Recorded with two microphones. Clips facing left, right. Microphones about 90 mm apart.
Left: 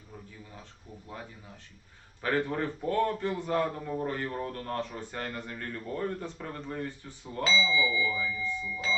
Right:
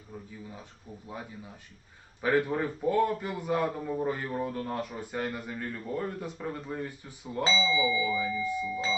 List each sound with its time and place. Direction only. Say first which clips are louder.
2.2 s a man's voice: right 3 dB; 10° right (ahead or behind)
7.4 s speech: even; 30° right (ahead or behind)